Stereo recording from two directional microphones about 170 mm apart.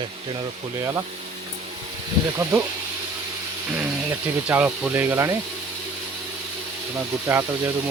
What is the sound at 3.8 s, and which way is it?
Speech, 10° right (ahead or behind).